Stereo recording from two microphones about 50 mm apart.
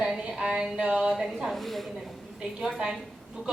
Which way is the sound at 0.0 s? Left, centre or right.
Centre.